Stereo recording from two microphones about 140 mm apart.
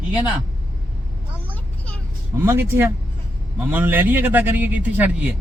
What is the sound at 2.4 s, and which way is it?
A man's voice, 15° right (ahead or behind).